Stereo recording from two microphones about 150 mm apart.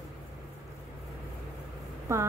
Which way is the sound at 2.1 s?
20° right (ahead or behind).